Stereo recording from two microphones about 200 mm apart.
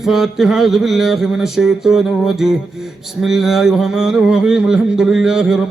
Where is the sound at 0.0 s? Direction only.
Centre (ahead or behind).